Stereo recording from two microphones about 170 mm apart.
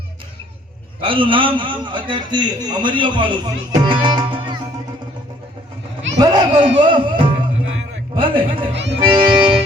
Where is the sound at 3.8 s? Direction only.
30° right (ahead or behind).